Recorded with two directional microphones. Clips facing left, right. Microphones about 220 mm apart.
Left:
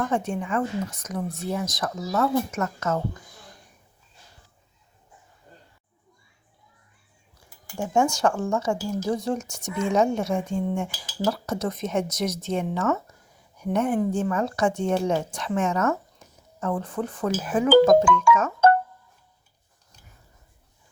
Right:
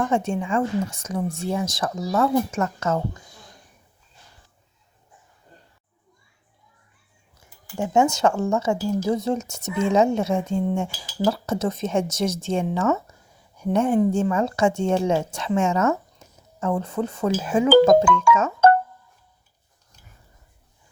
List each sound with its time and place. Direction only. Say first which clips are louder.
0.1 s cutlery: right 3 dB; 25° right (ahead or behind)
7.9 s cutlery: right 3 dB; 20° right (ahead or behind)
14.1 s speech: right 3 dB; 25° right (ahead or behind)
16.7 s cutlery: right 3 dB; 25° right (ahead or behind)